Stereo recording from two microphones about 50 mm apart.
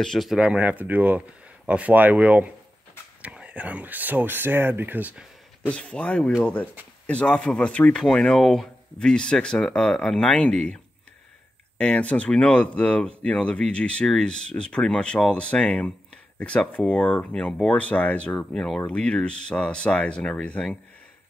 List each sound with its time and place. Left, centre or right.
0.4 s speech: right
5.7 s speech: left
11.8 s speech: left